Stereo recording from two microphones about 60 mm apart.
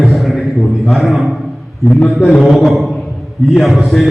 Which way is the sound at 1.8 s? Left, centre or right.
Centre.